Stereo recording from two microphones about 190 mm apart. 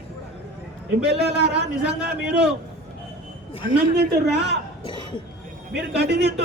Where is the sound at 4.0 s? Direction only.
60° right (ahead or behind).